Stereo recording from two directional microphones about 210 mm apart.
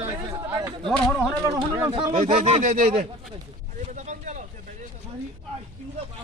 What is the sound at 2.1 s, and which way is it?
Speech, 35° right (ahead or behind).